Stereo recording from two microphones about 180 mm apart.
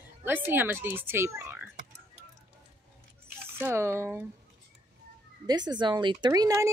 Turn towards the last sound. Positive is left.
turn(degrees=-20)  # may be behind; listen again after turning